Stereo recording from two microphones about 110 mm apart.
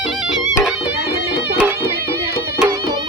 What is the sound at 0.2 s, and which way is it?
Music, 5° right (ahead or behind).